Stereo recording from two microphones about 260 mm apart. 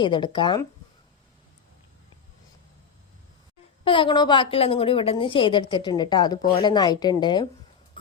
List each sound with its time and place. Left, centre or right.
0.0 s a woman's voice: centre
3.8 s a woman's voice: centre